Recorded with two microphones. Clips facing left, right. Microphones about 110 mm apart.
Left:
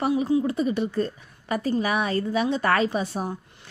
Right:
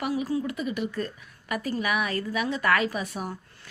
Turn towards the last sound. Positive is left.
turn(degrees=30)  # may be behind; listen again after turning